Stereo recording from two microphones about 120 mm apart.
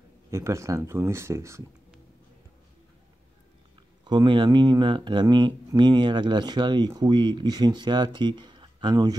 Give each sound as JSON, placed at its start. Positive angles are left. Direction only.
{"t": 0.3, "sound": "speech", "side_deg": -25}
{"t": 4.0, "sound": "speech", "side_deg": -40}